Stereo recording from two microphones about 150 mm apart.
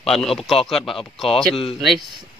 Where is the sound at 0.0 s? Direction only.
Centre (ahead or behind).